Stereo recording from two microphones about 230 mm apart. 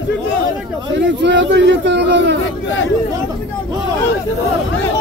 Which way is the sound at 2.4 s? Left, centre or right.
Left.